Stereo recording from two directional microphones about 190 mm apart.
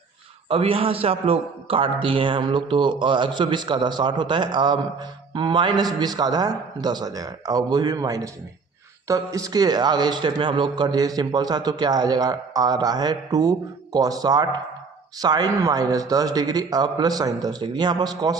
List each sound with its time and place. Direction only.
0.4 s a man's voice: 30° right (ahead or behind)